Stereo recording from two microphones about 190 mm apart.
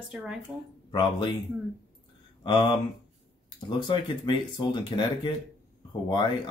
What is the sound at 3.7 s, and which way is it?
Speech, 25° left (ahead or behind).